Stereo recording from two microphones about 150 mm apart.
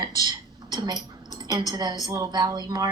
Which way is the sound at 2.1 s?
30° right (ahead or behind).